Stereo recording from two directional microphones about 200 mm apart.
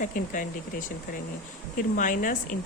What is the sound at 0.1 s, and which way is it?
Speech, 40° left (ahead or behind).